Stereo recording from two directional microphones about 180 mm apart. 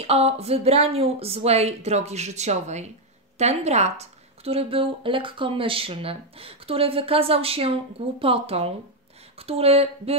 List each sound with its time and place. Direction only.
0.0 s a woman's voice: 35° right (ahead or behind)